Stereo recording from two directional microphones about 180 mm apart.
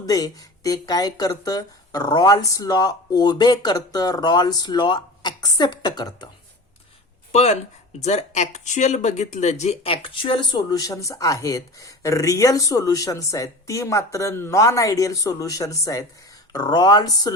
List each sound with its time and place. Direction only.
0.0 s speech: 20° left (ahead or behind)
7.3 s speech: 35° left (ahead or behind); by 17.3 s 20° left (ahead or behind)